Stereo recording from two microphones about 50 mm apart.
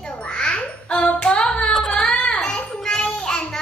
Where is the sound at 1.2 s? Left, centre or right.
Centre.